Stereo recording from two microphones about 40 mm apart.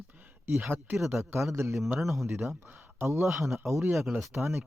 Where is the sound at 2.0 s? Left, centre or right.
Centre.